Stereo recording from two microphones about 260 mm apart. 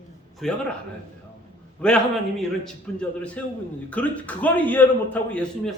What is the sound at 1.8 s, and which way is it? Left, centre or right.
A man's voice, centre.